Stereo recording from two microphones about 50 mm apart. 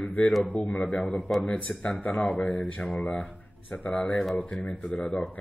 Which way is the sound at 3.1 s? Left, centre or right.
Left.